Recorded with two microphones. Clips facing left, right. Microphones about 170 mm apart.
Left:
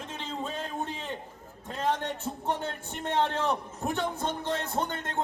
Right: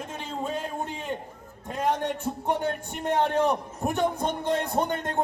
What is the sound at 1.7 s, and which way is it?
A man's voice, 15° right (ahead or behind).